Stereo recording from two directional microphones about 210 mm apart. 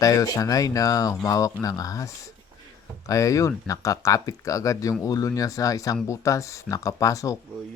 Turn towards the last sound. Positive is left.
turn(degrees=15)  # may be behind; listen again after turning